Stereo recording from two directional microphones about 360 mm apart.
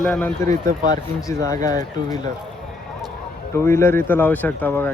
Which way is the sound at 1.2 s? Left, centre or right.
Centre.